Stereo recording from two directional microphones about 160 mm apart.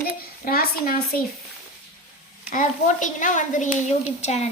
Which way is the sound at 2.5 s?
55° left (ahead or behind).